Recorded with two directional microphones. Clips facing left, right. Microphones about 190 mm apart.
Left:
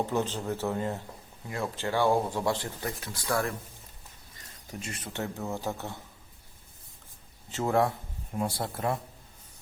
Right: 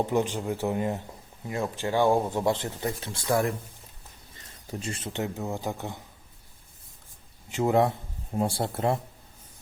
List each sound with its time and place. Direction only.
0.0 s speech: 15° right (ahead or behind)
4.8 s speech: 30° right (ahead or behind)
7.5 s speech: 20° right (ahead or behind)